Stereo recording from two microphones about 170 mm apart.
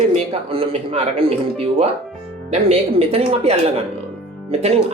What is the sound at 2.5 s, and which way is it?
A man's voice, 35° right (ahead or behind).